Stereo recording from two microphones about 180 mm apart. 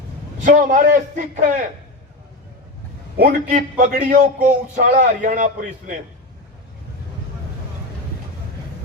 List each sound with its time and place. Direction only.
0.4 s a man's voice: 50° right (ahead or behind)
3.2 s a man's voice: 50° right (ahead or behind)